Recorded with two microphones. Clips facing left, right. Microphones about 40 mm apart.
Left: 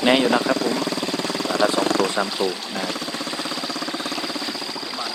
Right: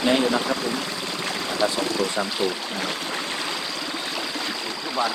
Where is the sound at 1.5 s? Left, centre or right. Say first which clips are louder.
Left 4 dB; left.